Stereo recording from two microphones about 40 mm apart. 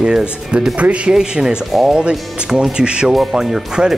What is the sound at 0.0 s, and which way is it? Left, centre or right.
Speech, right.